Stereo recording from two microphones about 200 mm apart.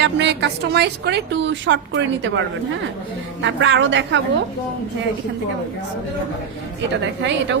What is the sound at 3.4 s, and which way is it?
Speech, 65° right (ahead or behind).